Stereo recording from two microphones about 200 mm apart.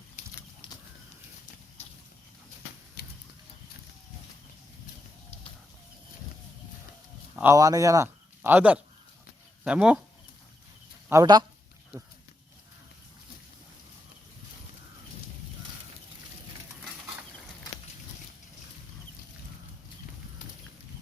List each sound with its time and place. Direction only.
3.0 s a sound: 50° left (ahead or behind)
7.3 s speech: 15° right (ahead or behind)
11.1 s speech: 20° right (ahead or behind)